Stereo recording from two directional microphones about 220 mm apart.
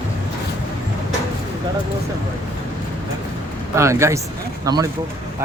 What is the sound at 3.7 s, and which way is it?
Speech, 15° right (ahead or behind).